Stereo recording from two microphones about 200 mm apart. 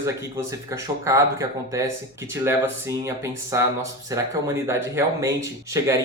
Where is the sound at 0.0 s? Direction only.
15° right (ahead or behind).